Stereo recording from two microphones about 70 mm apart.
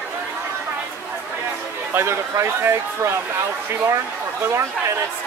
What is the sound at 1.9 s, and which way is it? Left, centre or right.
Speech, right.